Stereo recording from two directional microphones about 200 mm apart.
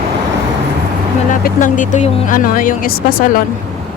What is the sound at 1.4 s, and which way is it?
Speech, 40° left (ahead or behind).